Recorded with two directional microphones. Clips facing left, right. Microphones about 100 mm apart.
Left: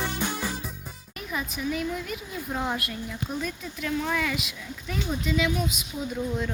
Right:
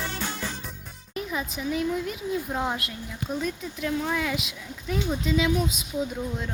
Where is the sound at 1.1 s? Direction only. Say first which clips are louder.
Right 2 dB; 25° right (ahead or behind).